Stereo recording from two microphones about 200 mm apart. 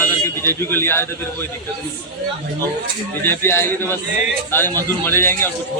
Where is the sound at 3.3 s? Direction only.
10° left (ahead or behind).